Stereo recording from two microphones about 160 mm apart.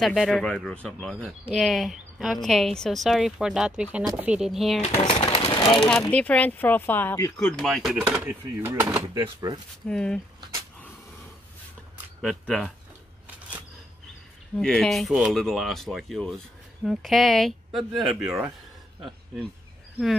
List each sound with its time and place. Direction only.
0.0 s speech: centre (ahead or behind)
5.0 s a sound: 35° left (ahead or behind)
6.1 s speech: 10° left (ahead or behind)
7.3 s speech: 5° left (ahead or behind)
8.5 s speech: 15° right (ahead or behind)
9.8 s speech: 5° left (ahead or behind)
12.2 s speech: 5° left (ahead or behind)
14.6 s speech: 5° left (ahead or behind)